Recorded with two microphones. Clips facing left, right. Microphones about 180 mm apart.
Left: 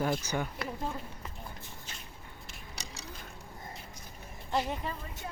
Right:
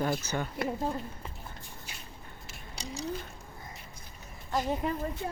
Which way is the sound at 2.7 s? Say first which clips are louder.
Right 10 dB; 35° right (ahead or behind).